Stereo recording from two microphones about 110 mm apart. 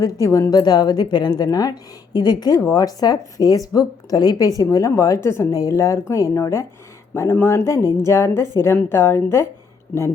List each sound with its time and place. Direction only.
0.0 s a woman's voice: 30° left (ahead or behind)